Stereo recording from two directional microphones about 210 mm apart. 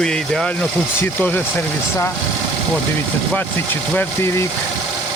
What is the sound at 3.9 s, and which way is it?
Speech, 10° left (ahead or behind).